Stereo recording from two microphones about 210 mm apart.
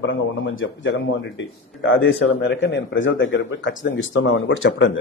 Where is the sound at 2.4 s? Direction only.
55° left (ahead or behind).